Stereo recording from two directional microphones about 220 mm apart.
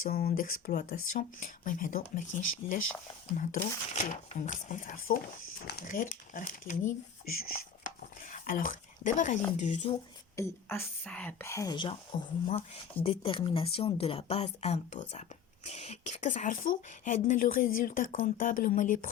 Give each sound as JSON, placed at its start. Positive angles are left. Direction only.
{"t": 0.0, "sound": "speech", "side_deg": 40}
{"t": 10.3, "sound": "speech", "side_deg": 10}